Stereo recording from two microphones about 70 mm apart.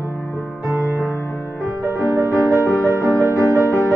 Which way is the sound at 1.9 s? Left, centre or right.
Right.